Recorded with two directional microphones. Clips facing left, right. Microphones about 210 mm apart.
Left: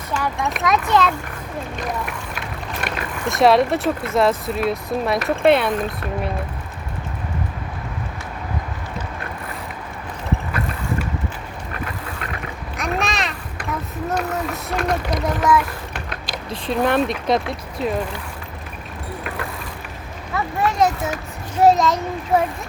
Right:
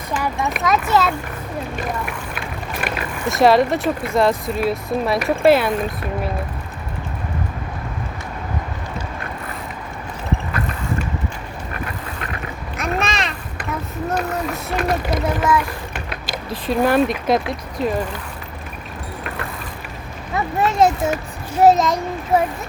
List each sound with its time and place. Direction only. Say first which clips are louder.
0.4 s speech: right 1 dB; centre (ahead or behind)
2.8 s speech: right 2 dB; centre (ahead or behind)
12.7 s a sound: right 1 dB; centre (ahead or behind)
14.1 s speech: right 1 dB; centre (ahead or behind)
20.3 s a child's voice: right 2 dB; 25° right (ahead or behind)